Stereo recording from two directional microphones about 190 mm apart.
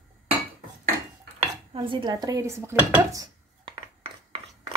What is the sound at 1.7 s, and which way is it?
Speech, 25° right (ahead or behind).